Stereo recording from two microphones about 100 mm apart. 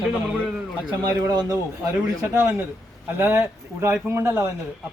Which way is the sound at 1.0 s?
40° right (ahead or behind).